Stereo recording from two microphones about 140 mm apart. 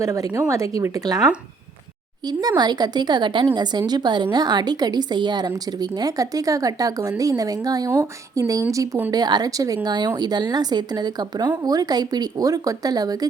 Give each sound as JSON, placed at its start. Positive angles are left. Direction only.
{"t": 0.0, "sound": "speech", "side_deg": -25}
{"t": 2.2, "sound": "a woman's voice", "side_deg": -30}